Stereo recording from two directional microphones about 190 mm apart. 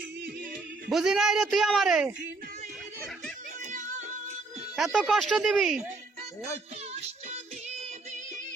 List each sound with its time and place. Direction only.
0.9 s speech: centre (ahead or behind)
3.7 s music: 40° right (ahead or behind)
4.8 s speech: centre (ahead or behind)